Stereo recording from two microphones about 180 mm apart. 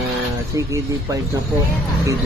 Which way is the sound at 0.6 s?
15° right (ahead or behind).